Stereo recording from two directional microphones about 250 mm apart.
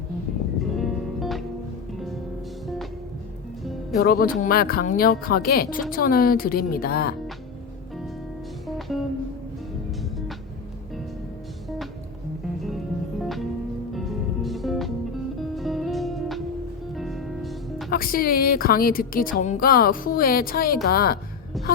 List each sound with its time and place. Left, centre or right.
0.6 s music: centre
3.9 s a woman's voice: left
12.6 s music: centre
17.9 s a woman's voice: left